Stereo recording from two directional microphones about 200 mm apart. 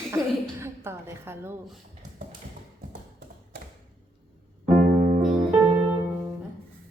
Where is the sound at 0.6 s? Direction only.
10° right (ahead or behind).